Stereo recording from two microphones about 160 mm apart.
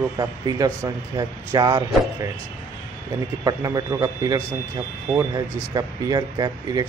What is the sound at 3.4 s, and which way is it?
Speech, 20° right (ahead or behind).